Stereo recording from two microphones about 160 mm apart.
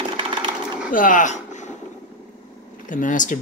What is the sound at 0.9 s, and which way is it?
Speech, 55° left (ahead or behind).